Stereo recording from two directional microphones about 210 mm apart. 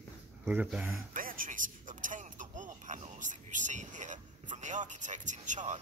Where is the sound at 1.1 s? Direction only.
40° right (ahead or behind).